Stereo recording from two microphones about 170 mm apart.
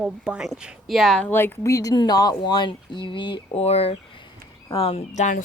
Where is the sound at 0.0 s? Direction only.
5° right (ahead or behind).